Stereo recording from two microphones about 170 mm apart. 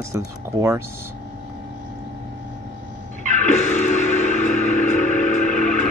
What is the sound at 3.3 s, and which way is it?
Music, 45° left (ahead or behind).